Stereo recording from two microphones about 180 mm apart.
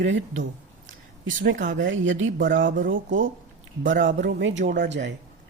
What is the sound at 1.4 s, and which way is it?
Speech, 75° right (ahead or behind).